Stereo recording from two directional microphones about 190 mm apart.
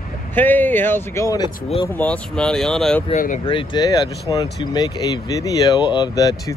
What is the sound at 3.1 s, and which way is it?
Speech, 40° left (ahead or behind).